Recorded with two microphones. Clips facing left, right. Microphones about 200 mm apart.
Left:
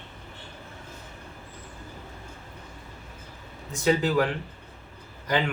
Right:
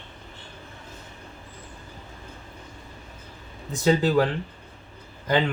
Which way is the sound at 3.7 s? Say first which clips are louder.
Right 3 dB; 35° right (ahead or behind).